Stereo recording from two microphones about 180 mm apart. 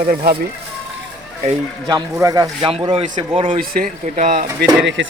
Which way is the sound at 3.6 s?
50° right (ahead or behind).